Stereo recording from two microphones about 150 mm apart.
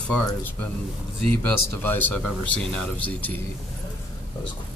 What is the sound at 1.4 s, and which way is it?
Speech, 10° left (ahead or behind).